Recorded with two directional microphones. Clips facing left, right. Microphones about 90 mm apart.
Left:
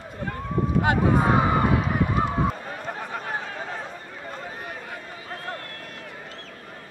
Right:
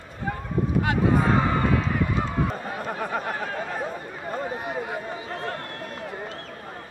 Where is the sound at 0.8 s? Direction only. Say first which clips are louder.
Left 2 dB; 20° left (ahead or behind).